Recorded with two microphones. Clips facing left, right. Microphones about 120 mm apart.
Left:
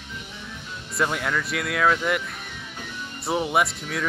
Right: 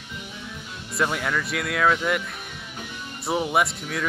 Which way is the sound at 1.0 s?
Centre (ahead or behind).